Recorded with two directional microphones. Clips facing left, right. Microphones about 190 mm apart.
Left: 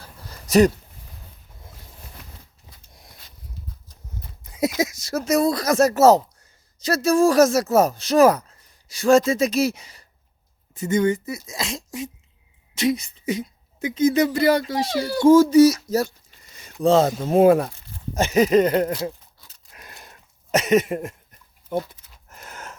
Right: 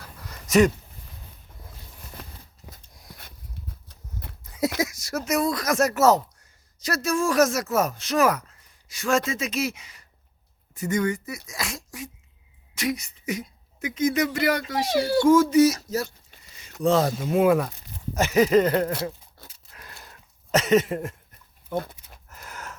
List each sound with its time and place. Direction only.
0.0 s dog: 30° left (ahead or behind)
3.8 s horse: 65° right (ahead or behind)
4.8 s speech: 25° left (ahead or behind)
14.9 s speech: 25° right (ahead or behind)
15.2 s speech: 35° left (ahead or behind)
19.7 s a sound: 20° left (ahead or behind)
21.7 s speech: 20° left (ahead or behind)
22.3 s gasp: 25° left (ahead or behind)